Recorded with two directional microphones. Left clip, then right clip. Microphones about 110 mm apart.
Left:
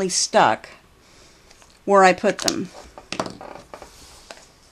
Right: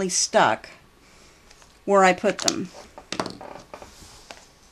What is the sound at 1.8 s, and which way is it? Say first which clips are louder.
Speech: left 3 dB; 40° left (ahead or behind).